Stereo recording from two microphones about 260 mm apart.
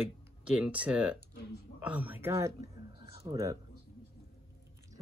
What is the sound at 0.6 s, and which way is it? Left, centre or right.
Speech, centre.